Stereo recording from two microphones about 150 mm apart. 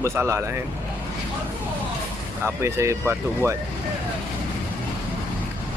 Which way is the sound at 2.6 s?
15° right (ahead or behind).